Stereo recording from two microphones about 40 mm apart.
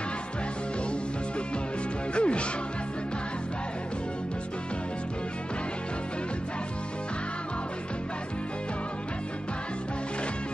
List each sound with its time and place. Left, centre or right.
2.1 s music: left